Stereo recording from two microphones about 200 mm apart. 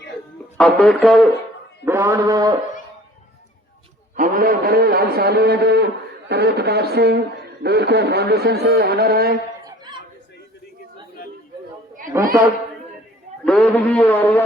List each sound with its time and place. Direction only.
0.5 s speech: 5° left (ahead or behind)
1.8 s mantra: 10° right (ahead or behind)
4.1 s a man's voice: 45° right (ahead or behind)
9.6 s chatter: 20° right (ahead or behind)
12.1 s a woman's voice: 15° right (ahead or behind)
13.4 s a man's voice: 5° left (ahead or behind)